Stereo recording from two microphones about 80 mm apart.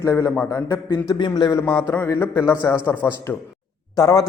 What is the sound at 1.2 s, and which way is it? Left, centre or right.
Speech, left.